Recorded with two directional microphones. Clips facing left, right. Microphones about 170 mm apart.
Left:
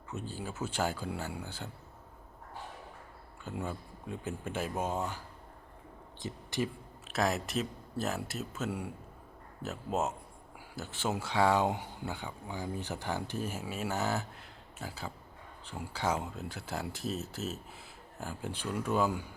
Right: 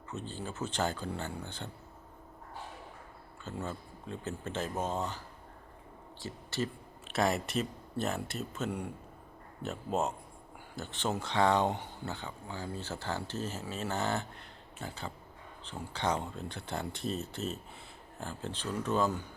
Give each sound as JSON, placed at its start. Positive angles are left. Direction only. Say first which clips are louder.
{"t": 0.1, "sound": "speech", "louder": "even", "side_deg": 10}
{"t": 3.4, "sound": "speech", "louder": "left 1 dB", "side_deg": 10}
{"t": 7.1, "sound": "speech", "louder": "right 1 dB", "side_deg": 0}